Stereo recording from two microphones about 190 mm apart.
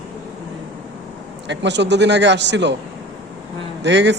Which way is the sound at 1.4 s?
65° right (ahead or behind).